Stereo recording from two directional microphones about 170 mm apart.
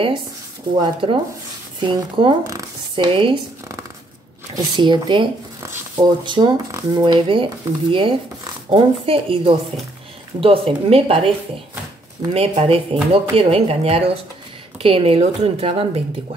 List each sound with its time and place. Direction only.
1.0 s speech: 30° right (ahead or behind)
2.4 s a sound: 20° right (ahead or behind)
3.1 s speech: 30° right (ahead or behind)
4.6 s speech: 25° right (ahead or behind)
12.3 s speech: 35° right (ahead or behind)